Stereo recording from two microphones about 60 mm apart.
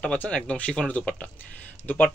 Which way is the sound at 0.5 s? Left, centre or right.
Centre.